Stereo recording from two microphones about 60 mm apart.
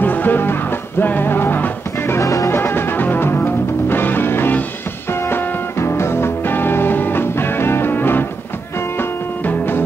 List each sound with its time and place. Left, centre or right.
0.0 s music: left
2.2 s music: left
2.5 s music: left